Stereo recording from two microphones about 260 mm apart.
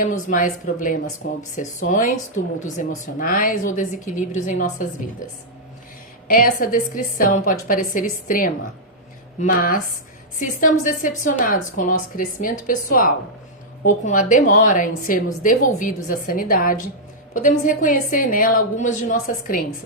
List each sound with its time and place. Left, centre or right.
0.0 s a woman's voice: left
3.2 s a woman's voice: left
6.2 s a woman's voice: left